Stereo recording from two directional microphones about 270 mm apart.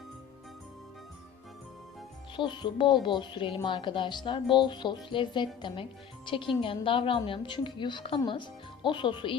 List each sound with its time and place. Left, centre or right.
2.3 s a woman's voice: centre